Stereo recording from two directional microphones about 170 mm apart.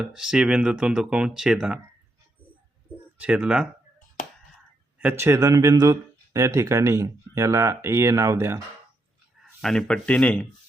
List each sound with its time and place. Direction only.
0.0 s speech: 5° right (ahead or behind)
3.2 s speech: 5° right (ahead or behind)
4.9 s speech: 15° right (ahead or behind)
9.6 s speech: 5° left (ahead or behind)